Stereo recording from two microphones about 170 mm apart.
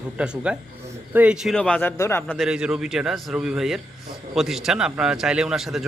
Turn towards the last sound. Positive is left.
turn(degrees=0)  # may be behind; listen again after turning